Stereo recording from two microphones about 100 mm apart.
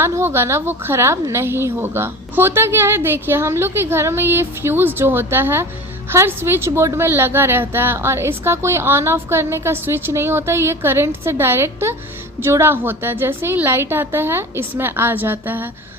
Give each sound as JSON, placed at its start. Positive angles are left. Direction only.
{"t": 0.0, "sound": "a woman's voice", "side_deg": -25}